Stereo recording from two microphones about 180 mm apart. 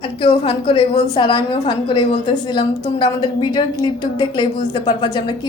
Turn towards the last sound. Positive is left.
turn(degrees=25)  # may be behind; listen again after turning